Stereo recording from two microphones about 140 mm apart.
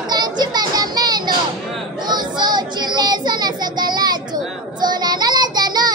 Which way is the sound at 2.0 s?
30° right (ahead or behind).